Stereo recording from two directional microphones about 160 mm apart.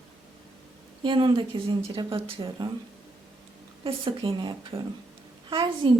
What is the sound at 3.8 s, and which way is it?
Speech, 30° right (ahead or behind).